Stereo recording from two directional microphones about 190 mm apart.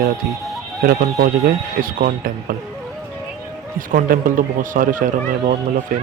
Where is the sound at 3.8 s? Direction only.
45° right (ahead or behind).